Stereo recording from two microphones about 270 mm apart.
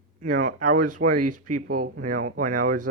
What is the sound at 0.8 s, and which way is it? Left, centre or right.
Speech, right.